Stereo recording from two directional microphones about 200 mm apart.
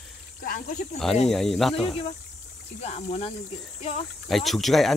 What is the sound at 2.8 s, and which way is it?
Speech, 30° left (ahead or behind).